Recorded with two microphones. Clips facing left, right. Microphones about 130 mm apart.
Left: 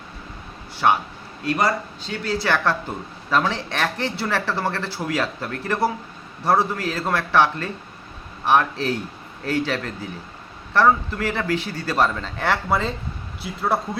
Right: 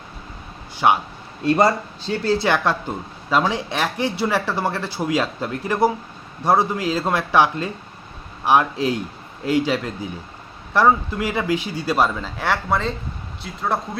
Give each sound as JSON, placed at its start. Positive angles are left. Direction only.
{"t": 0.8, "sound": "speech", "side_deg": -15}
{"t": 1.5, "sound": "speech", "side_deg": -30}
{"t": 3.2, "sound": "speech", "side_deg": -15}